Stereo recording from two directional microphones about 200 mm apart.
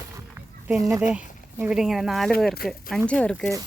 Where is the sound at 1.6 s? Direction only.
5° right (ahead or behind).